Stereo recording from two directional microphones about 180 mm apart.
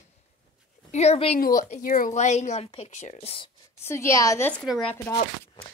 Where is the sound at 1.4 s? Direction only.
50° left (ahead or behind); by 3.5 s 30° left (ahead or behind).